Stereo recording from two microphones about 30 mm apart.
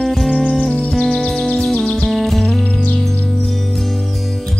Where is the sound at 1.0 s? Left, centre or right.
Centre.